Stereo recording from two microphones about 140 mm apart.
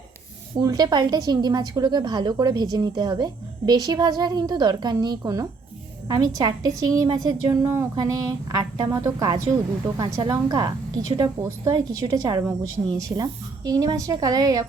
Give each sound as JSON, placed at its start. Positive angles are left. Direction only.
{"t": 0.6, "sound": "a woman's voice", "side_deg": -30}